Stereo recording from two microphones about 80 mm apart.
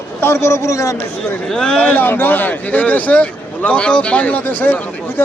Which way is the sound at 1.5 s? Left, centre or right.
Centre.